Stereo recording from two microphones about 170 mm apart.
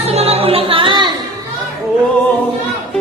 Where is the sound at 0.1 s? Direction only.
35° right (ahead or behind).